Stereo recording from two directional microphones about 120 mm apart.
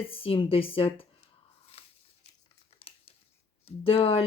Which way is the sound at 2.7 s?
55° left (ahead or behind).